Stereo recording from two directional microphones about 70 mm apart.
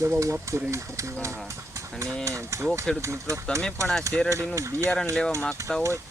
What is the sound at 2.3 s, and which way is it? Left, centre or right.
Speech, right.